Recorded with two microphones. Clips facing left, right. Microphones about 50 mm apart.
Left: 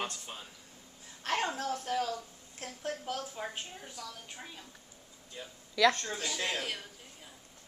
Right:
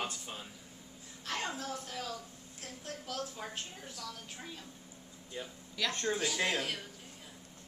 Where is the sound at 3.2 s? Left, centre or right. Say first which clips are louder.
Left 1 dB; centre.